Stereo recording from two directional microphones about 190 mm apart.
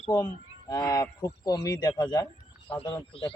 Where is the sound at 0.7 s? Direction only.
20° left (ahead or behind).